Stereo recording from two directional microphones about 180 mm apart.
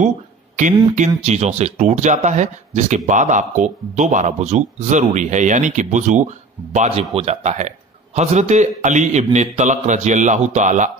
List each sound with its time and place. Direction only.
0.9 s a man's voice: 40° right (ahead or behind)